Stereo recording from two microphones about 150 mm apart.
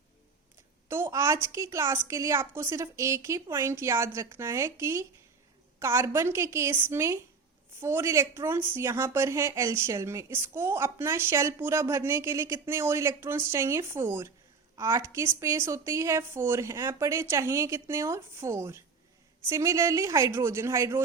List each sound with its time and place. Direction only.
0.9 s a woman's voice: 15° right (ahead or behind)